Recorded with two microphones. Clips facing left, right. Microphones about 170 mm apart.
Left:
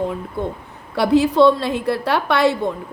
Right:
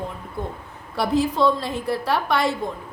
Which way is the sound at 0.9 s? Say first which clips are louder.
Left 7 dB; 70° left (ahead or behind).